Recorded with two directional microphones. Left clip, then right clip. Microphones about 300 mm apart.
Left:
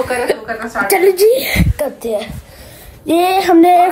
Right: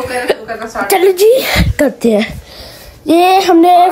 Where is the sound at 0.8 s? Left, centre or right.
Centre.